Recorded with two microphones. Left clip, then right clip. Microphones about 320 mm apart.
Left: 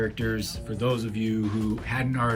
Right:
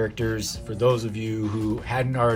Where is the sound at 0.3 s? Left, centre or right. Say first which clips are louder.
Right 4 dB; centre.